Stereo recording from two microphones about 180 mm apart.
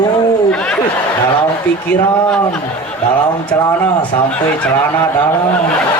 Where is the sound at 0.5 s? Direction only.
5° left (ahead or behind).